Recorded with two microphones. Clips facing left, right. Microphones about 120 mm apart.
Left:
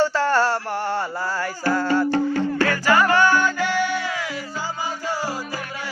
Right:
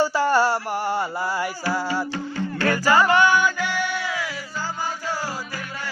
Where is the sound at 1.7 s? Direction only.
10° right (ahead or behind).